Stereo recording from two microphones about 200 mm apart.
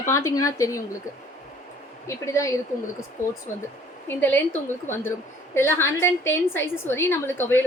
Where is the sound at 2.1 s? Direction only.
15° left (ahead or behind).